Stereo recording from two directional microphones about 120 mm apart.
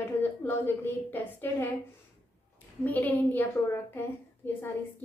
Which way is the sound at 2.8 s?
15° left (ahead or behind).